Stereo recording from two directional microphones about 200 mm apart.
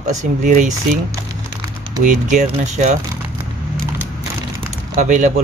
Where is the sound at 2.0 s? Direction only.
40° right (ahead or behind).